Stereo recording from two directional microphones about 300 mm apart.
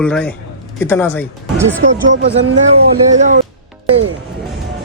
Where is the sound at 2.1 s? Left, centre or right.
Right.